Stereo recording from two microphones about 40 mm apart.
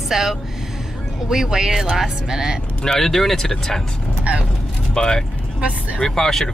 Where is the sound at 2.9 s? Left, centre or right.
Centre.